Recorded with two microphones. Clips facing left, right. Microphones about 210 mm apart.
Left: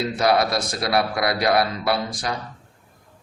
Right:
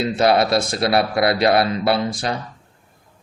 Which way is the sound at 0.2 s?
25° right (ahead or behind).